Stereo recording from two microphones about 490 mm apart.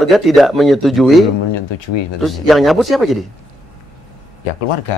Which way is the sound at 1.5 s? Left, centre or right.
Left.